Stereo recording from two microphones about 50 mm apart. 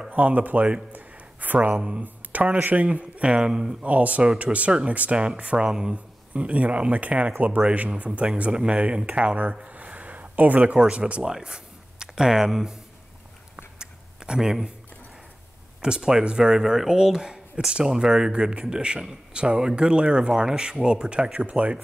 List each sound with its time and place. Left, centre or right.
0.1 s speech: right
0.9 s a sound: right
1.8 s speech: right
3.8 s speech: right
11.3 s speech: centre
13.7 s a sound: centre
15.8 s speech: centre